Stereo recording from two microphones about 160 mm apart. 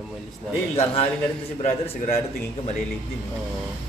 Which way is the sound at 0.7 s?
40° left (ahead or behind).